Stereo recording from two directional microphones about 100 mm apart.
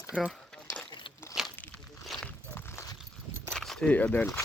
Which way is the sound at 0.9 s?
55° left (ahead or behind).